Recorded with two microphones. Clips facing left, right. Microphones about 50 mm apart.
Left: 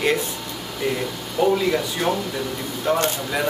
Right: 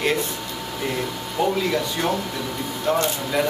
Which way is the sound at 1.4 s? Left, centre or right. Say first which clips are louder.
Left 3 dB; centre.